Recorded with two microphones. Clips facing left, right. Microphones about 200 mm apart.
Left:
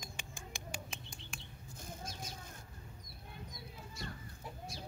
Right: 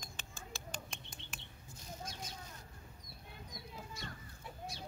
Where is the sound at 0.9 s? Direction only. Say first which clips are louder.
Left 2 dB; centre (ahead or behind).